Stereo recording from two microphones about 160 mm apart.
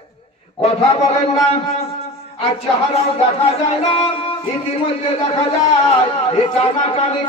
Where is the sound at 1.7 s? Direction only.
40° left (ahead or behind).